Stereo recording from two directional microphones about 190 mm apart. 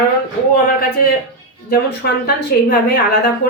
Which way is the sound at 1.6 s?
55° left (ahead or behind).